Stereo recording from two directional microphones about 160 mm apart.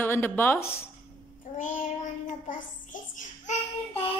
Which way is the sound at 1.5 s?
55° left (ahead or behind).